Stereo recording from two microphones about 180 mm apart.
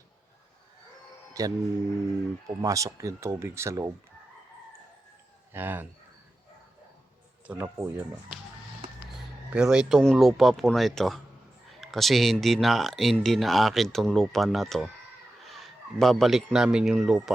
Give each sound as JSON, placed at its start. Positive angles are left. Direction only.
{"t": 1.3, "sound": "speech", "side_deg": -20}
{"t": 5.5, "sound": "speech", "side_deg": -10}
{"t": 7.4, "sound": "speech", "side_deg": -10}
{"t": 9.5, "sound": "a man's voice", "side_deg": -5}